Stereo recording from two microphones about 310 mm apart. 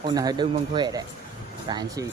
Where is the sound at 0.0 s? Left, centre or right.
Centre.